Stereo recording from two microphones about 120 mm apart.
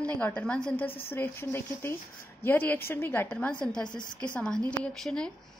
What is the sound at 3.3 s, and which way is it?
Speech, 10° left (ahead or behind).